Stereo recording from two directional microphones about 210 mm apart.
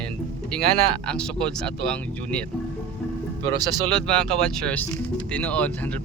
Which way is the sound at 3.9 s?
5° left (ahead or behind).